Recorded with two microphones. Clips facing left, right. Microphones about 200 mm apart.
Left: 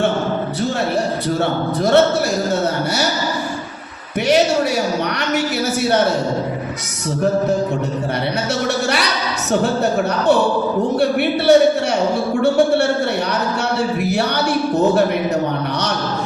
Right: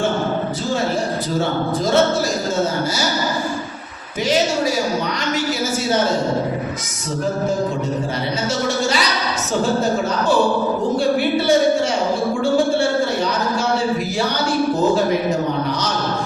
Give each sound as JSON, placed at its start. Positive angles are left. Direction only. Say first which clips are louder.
{"t": 1.4, "sound": "a man's voice", "louder": "right 1 dB", "side_deg": 65}
{"t": 8.6, "sound": "a man's voice", "louder": "even", "side_deg": 65}
{"t": 11.0, "sound": "a man's voice", "louder": "left 2 dB", "side_deg": 65}
{"t": 12.4, "sound": "music", "louder": "left 4 dB", "side_deg": 65}